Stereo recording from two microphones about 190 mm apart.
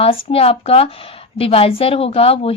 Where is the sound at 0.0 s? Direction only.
30° left (ahead or behind).